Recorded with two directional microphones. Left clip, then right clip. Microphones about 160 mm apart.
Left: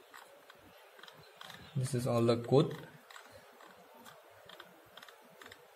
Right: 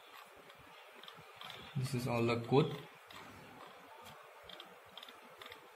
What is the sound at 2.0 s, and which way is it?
Speech, 90° left.